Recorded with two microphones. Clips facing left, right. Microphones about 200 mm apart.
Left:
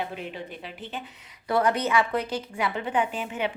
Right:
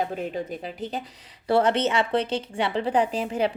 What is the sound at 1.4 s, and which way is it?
A woman's voice, 30° right (ahead or behind).